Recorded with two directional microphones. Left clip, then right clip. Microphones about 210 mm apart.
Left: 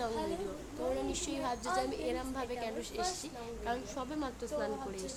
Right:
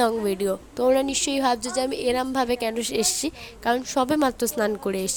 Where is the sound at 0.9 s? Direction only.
45° right (ahead or behind).